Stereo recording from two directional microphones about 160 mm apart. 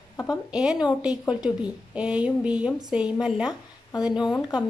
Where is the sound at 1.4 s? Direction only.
5° right (ahead or behind).